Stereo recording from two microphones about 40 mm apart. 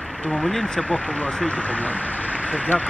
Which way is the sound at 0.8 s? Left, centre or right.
Left.